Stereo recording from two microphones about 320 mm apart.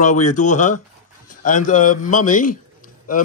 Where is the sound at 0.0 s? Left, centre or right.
Left.